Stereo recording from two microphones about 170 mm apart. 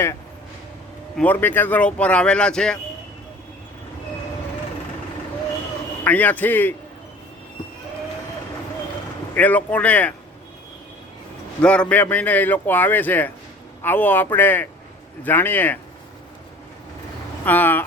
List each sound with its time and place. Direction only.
1.1 s a man's voice: 10° left (ahead or behind)
6.1 s a man's voice: 10° left (ahead or behind)
9.3 s a man's voice: 10° left (ahead or behind)
11.6 s a man's voice: 5° left (ahead or behind)
17.4 s a man's voice: 10° left (ahead or behind)